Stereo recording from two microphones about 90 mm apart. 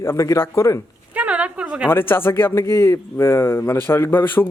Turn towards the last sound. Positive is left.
turn(degrees=25)  # may be behind; listen again after turning